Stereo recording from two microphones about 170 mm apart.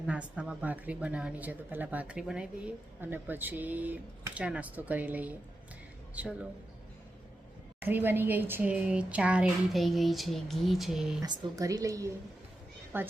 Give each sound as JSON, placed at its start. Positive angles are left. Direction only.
{"t": 0.1, "sound": "a woman's voice", "side_deg": -5}
{"t": 7.8, "sound": "speech", "side_deg": -10}
{"t": 11.2, "sound": "a woman's voice", "side_deg": -20}